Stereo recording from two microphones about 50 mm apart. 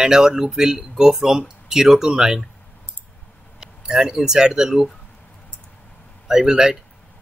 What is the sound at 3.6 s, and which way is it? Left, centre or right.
Speech, centre.